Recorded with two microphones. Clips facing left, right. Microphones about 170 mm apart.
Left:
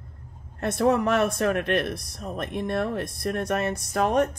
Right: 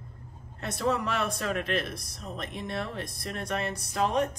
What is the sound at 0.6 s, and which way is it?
Speech, 55° left (ahead or behind).